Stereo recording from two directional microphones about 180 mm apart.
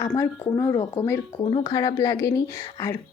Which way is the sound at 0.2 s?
15° left (ahead or behind).